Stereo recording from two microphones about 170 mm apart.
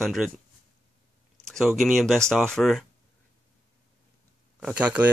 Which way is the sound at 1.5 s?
Centre (ahead or behind).